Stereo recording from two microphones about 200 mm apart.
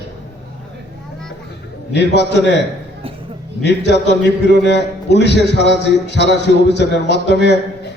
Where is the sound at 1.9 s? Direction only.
60° left (ahead or behind).